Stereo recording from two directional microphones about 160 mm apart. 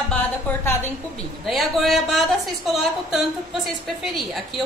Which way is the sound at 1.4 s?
Centre (ahead or behind).